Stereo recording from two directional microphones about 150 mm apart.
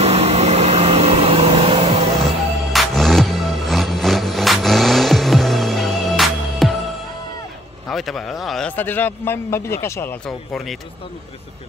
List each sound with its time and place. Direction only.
0.0 s vehicle: 45° right (ahead or behind)
2.7 s music: centre (ahead or behind)
7.9 s a man's voice: centre (ahead or behind); by 10.1 s 15° left (ahead or behind)
10.2 s speech: centre (ahead or behind)